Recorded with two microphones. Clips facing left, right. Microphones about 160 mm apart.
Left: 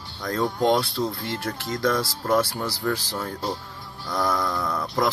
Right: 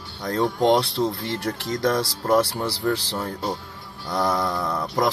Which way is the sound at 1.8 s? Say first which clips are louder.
Right 1 dB; 30° right (ahead or behind).